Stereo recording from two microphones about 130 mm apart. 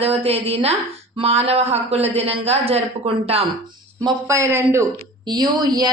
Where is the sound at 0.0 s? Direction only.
50° right (ahead or behind).